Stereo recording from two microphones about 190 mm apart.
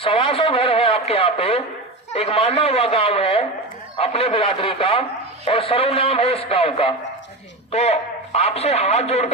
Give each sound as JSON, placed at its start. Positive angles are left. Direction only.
{"t": 0.0, "sound": "a man's voice", "side_deg": 30}